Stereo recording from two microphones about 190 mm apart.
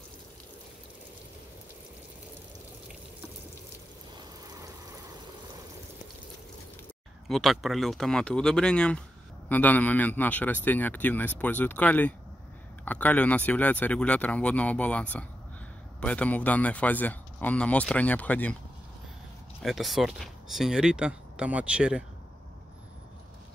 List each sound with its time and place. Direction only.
7.2 s speech: centre (ahead or behind)
19.6 s speech: centre (ahead or behind)